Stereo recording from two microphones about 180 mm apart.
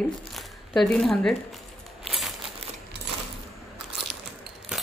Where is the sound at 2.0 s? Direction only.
Centre (ahead or behind).